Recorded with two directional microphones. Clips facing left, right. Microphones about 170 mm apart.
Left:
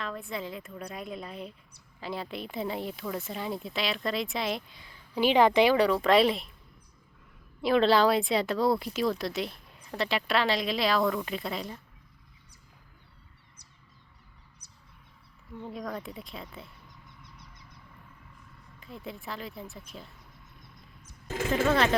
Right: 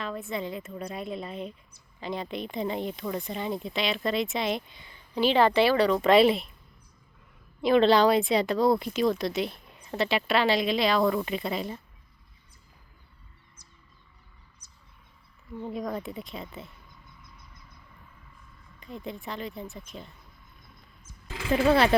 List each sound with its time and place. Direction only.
0.0 s speech: centre (ahead or behind)
5.2 s speech: 15° left (ahead or behind)
6.0 s speech: centre (ahead or behind)
7.6 s speech: centre (ahead or behind)
15.7 s speech: centre (ahead or behind)
17.2 s a sound: 75° left (ahead or behind)
18.8 s speech: 5° left (ahead or behind)
20.6 s a sound: 65° left (ahead or behind)
21.2 s speech: 45° left (ahead or behind)